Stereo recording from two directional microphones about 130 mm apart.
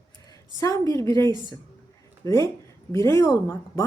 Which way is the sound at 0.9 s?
20° left (ahead or behind).